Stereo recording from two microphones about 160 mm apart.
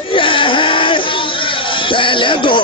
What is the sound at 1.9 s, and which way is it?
Music, 30° left (ahead or behind).